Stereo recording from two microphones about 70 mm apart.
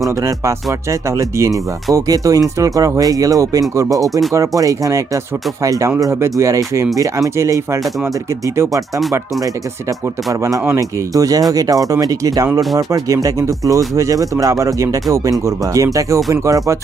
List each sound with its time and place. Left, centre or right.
0.2 s speech: right
10.8 s speech: right